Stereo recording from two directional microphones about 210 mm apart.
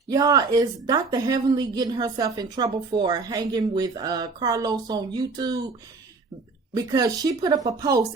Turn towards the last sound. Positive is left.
turn(degrees=-15)  # may be behind; listen again after turning